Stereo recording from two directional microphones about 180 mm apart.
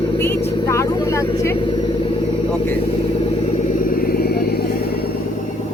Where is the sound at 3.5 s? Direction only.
50° left (ahead or behind).